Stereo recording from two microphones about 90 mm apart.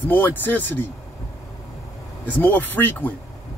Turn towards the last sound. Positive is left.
turn(degrees=20)  # may be behind; listen again after turning